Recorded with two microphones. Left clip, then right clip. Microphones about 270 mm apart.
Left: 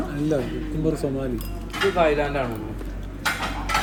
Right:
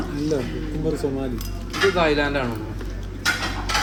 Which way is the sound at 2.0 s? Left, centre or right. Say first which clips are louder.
Even; right.